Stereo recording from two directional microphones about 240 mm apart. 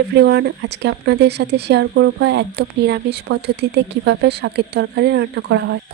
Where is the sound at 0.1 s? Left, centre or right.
Right.